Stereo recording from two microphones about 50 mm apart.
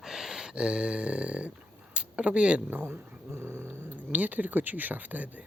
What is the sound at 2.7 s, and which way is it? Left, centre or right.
Speech, right.